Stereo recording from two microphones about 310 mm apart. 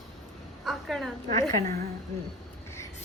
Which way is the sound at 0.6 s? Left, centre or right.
Centre.